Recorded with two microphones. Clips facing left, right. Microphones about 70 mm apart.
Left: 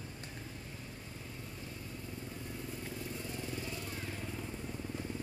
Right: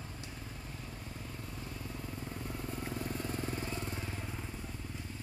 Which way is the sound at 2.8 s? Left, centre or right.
Right.